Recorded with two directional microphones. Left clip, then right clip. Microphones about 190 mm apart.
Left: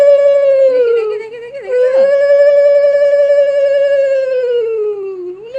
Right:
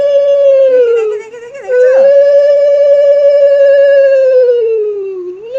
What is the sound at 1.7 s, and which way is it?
Dog, 15° left (ahead or behind).